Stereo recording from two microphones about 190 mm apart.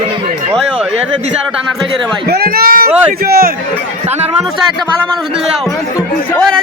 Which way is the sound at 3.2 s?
50° right (ahead or behind).